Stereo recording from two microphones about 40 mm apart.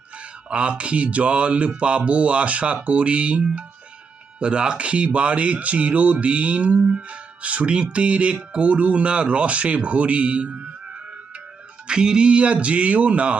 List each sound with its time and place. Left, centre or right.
0.5 s speech: right
11.9 s speech: right